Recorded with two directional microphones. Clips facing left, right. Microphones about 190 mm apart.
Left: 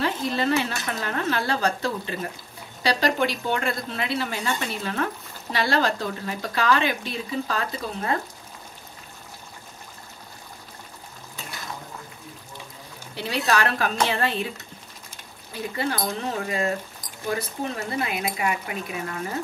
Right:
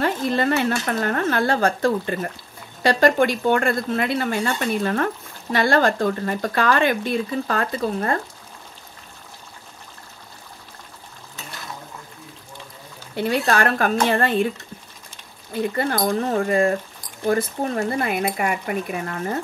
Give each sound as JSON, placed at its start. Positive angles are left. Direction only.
{"t": 0.0, "sound": "speech", "side_deg": -55}
{"t": 13.1, "sound": "speech", "side_deg": -50}
{"t": 15.7, "sound": "speech", "side_deg": -50}